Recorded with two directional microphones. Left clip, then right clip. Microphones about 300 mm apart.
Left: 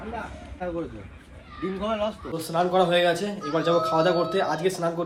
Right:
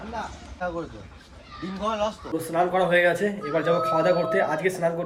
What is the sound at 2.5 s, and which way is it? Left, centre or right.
Speech, centre.